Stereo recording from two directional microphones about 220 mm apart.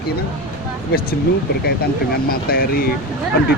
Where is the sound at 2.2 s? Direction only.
45° left (ahead or behind).